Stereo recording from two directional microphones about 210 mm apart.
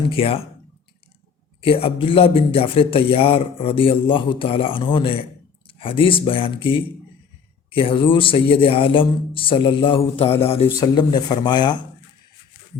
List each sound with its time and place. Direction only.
0.1 s speech: 25° left (ahead or behind)
1.6 s speech: 25° left (ahead or behind)